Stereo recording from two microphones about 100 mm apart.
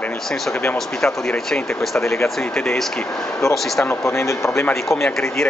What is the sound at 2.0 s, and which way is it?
Speech, 30° left (ahead or behind).